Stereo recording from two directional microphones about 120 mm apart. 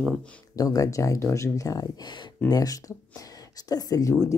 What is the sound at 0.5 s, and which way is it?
Speech, 30° left (ahead or behind).